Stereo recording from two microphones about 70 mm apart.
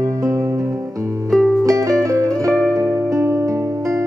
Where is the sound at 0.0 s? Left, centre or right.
Right.